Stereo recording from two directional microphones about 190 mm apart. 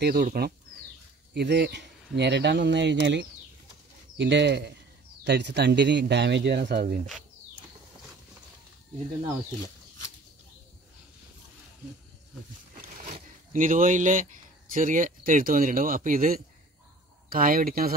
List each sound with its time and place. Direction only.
0.0 s speech: 50° right (ahead or behind)
1.3 s speech: 60° right (ahead or behind)
13.5 s speech: 45° right (ahead or behind)